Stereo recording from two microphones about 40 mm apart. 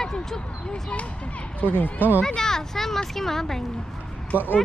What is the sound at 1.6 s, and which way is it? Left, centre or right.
Speech, left.